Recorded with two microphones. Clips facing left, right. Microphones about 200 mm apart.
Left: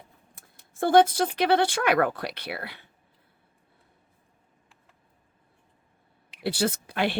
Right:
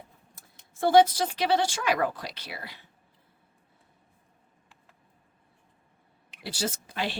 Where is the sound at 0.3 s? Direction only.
55° left (ahead or behind).